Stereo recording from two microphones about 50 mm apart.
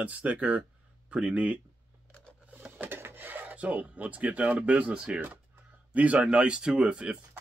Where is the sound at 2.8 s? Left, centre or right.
Right.